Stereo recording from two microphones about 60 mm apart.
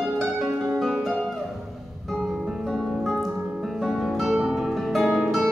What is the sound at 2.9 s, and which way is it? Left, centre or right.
Music, centre.